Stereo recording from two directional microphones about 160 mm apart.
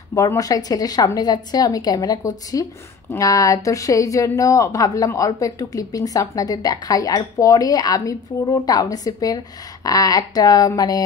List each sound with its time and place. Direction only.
0.1 s a woman's voice: 20° left (ahead or behind)